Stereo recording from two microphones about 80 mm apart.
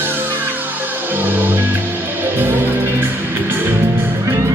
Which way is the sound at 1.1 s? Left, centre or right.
Right.